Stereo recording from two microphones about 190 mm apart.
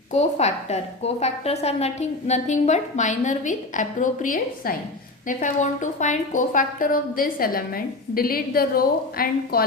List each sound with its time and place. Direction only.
0.1 s a woman's voice: 35° left (ahead or behind); by 9.6 s 50° left (ahead or behind)